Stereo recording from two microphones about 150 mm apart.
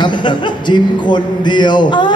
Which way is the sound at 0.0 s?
30° left (ahead or behind).